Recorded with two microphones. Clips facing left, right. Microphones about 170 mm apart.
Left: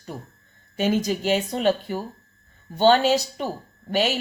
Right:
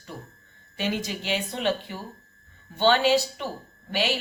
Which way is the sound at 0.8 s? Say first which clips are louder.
Left 7 dB; 45° left (ahead or behind).